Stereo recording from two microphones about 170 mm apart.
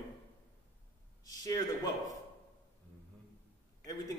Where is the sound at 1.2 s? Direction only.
20° left (ahead or behind).